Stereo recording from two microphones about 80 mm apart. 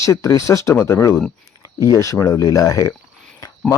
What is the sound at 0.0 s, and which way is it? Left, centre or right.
Speech, left.